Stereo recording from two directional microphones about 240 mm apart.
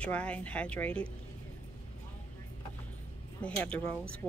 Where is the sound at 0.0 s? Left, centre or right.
Centre.